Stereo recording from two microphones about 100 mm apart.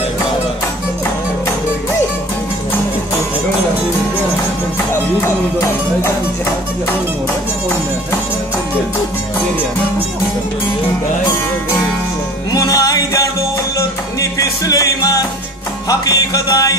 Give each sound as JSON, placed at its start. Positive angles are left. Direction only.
{"t": 12.5, "sound": "music", "side_deg": 35}
{"t": 14.4, "sound": "music", "side_deg": 35}